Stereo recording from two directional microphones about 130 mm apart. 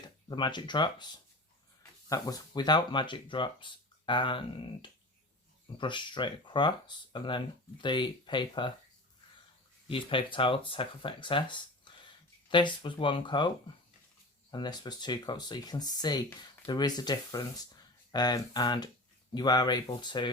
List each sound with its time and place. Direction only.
0.3 s speech: 35° left (ahead or behind)
9.9 s speech: 40° left (ahead or behind)
14.5 s speech: 35° left (ahead or behind)